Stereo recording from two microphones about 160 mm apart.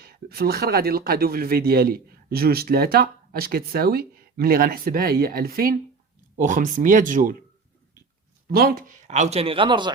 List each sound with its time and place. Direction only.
0.0 s speech: 75° right (ahead or behind)
6.3 s speech: 55° right (ahead or behind)
8.5 s speech: 65° right (ahead or behind); by 9.9 s 30° right (ahead or behind)